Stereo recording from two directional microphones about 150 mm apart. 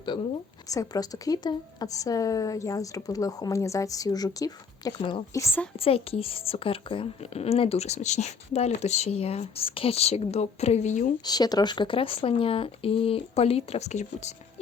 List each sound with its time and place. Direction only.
0.7 s speech: 25° left (ahead or behind)
5.7 s a woman's voice: 40° left (ahead or behind)
11.2 s speech: 25° left (ahead or behind); by 14.3 s 50° left (ahead or behind)